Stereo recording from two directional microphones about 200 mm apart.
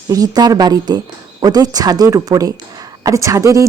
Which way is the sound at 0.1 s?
20° right (ahead or behind).